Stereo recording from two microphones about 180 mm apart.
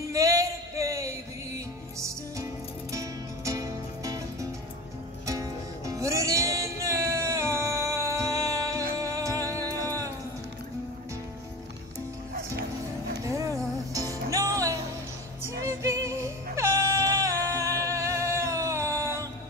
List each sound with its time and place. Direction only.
0.1 s a sound: 20° right (ahead or behind)
2.0 s music: 20° right (ahead or behind)
13.2 s music: 15° right (ahead or behind)